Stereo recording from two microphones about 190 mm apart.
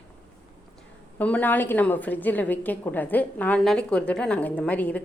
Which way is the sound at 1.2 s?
10° left (ahead or behind).